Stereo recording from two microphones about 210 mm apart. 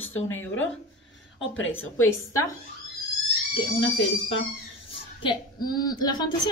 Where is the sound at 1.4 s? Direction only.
65° left (ahead or behind).